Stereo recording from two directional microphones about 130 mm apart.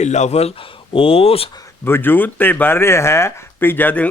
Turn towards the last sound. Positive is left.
turn(degrees=10)  # may be behind; listen again after turning